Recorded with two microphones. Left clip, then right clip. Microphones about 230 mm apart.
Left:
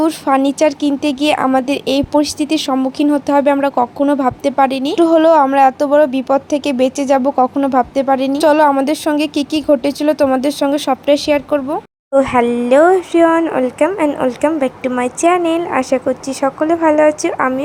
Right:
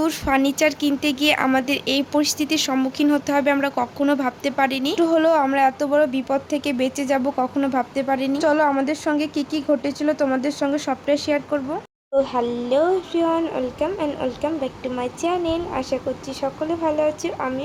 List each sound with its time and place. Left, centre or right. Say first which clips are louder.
0.0 s speech: left 6 dB; left